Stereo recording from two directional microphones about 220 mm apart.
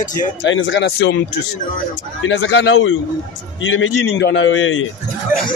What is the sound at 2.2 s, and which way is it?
Speech, 55° left (ahead or behind).